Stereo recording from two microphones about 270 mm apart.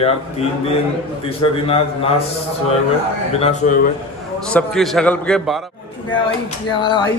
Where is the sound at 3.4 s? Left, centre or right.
Left.